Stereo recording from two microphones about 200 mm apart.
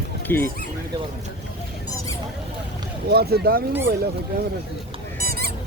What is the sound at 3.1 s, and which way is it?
Speech, 50° right (ahead or behind).